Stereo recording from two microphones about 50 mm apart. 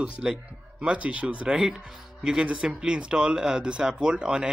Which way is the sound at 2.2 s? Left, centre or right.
Centre.